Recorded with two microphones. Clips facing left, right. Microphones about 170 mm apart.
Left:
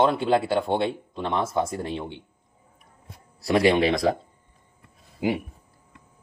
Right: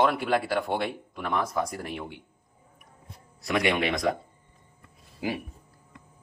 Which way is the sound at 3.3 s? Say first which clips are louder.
Left 6 dB; 35° left (ahead or behind).